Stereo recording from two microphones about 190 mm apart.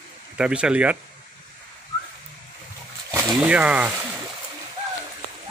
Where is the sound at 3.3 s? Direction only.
5° right (ahead or behind).